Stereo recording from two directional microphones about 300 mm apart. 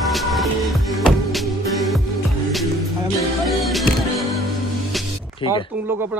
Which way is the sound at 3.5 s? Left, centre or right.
Centre.